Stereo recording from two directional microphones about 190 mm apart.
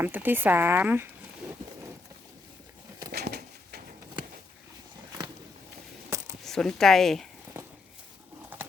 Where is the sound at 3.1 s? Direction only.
60° right (ahead or behind).